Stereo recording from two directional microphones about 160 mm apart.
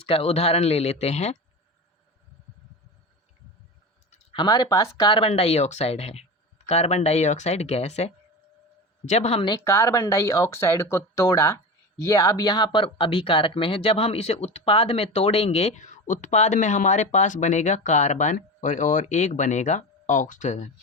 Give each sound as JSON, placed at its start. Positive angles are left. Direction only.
{"t": 0.0, "sound": "speech", "side_deg": 40}
{"t": 4.1, "sound": "a sound", "side_deg": 35}
{"t": 4.4, "sound": "speech", "side_deg": 20}
{"t": 9.6, "sound": "speech", "side_deg": 15}